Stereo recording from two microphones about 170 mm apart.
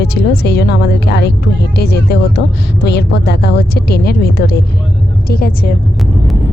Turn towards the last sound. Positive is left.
turn(degrees=60)  # may be behind; listen again after turning